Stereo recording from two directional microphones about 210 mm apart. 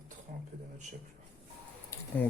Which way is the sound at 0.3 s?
40° right (ahead or behind).